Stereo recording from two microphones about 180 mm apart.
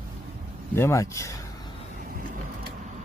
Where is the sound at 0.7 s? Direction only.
15° left (ahead or behind).